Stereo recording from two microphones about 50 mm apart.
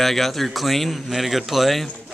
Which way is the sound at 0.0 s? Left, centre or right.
Centre.